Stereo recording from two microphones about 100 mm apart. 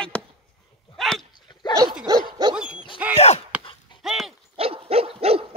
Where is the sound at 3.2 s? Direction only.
90° left.